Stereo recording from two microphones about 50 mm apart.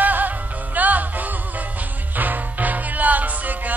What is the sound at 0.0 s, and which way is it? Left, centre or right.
Music, right.